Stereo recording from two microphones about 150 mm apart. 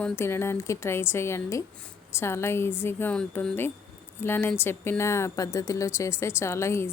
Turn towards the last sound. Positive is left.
turn(degrees=20)  # may be behind; listen again after turning